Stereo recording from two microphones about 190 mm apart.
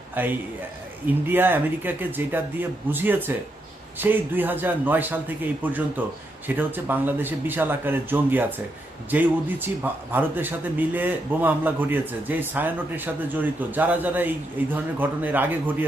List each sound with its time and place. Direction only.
0.1 s a man's voice: 10° right (ahead or behind)